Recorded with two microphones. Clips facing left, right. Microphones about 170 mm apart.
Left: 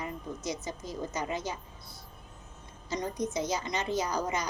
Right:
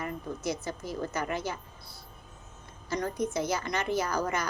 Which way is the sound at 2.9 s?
20° left (ahead or behind).